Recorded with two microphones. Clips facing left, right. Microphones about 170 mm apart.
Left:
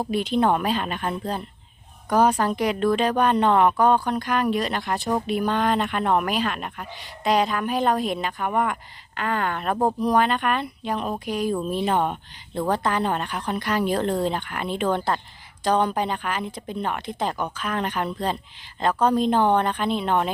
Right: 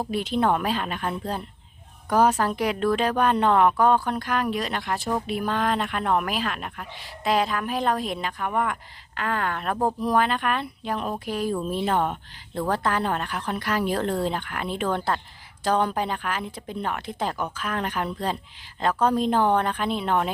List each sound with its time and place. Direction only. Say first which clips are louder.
0.0 s speech: left 2 dB; centre (ahead or behind)
11.1 s speech: left 2 dB; 10° left (ahead or behind)
12.7 s speech: left 1 dB; centre (ahead or behind)